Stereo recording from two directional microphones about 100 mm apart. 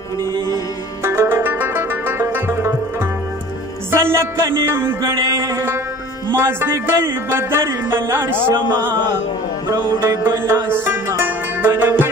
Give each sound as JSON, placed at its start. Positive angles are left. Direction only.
{"t": 1.0, "sound": "music", "side_deg": -25}